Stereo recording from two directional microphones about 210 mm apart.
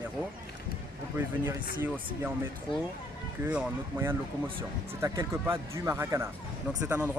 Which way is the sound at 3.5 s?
10° right (ahead or behind).